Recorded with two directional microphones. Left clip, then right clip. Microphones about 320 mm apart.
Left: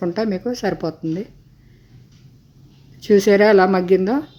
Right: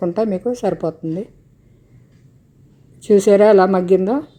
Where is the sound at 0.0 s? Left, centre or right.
Centre.